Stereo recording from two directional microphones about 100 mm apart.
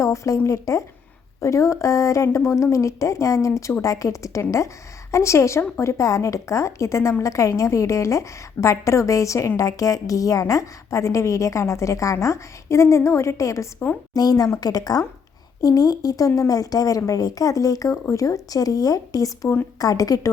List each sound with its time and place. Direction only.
0.0 s a woman's voice: 30° left (ahead or behind)